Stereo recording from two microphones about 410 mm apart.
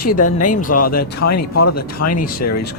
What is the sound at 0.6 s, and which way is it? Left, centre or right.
Speech, centre.